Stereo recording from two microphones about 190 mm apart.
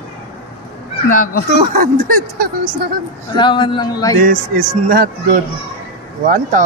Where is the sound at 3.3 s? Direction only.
25° left (ahead or behind).